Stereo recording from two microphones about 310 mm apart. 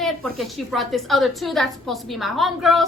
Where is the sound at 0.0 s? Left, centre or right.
Centre.